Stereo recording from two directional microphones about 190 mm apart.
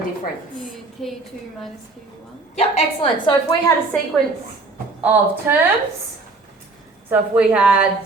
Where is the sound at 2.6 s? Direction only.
30° left (ahead or behind).